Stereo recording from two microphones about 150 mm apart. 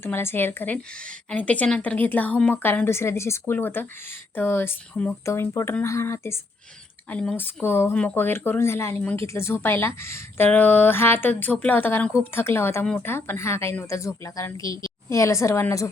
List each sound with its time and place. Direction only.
0.0 s speech: 15° left (ahead or behind)